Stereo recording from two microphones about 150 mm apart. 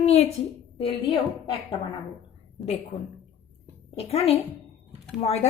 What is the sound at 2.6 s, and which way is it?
A woman's voice, 45° left (ahead or behind).